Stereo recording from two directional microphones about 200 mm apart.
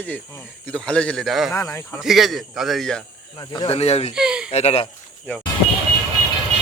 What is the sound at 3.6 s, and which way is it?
Speech, 30° left (ahead or behind).